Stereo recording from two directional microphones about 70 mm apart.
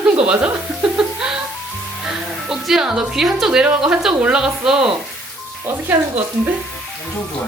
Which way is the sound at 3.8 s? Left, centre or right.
Centre.